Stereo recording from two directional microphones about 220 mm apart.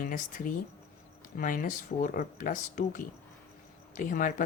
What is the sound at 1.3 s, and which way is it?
Speech, 40° left (ahead or behind).